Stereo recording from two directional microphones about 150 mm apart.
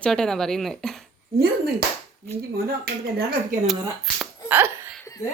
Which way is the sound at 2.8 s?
90° right.